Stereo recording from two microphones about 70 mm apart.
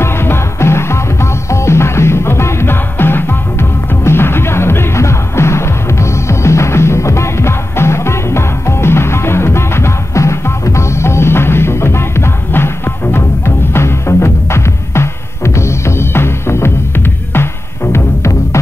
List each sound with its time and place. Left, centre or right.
0.0 s music: left
17.9 s music: left